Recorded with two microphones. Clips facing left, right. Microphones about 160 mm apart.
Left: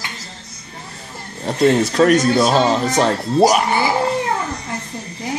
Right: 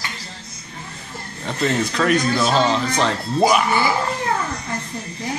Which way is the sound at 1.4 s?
40° left (ahead or behind).